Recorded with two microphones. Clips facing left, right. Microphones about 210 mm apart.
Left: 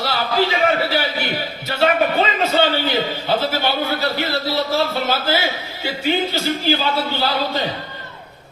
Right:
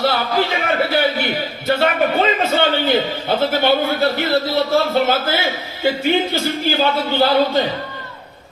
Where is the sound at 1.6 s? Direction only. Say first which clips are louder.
Right 1 dB; 50° right (ahead or behind).